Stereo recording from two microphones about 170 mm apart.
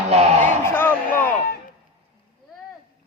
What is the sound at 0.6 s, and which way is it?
Speech, 10° left (ahead or behind).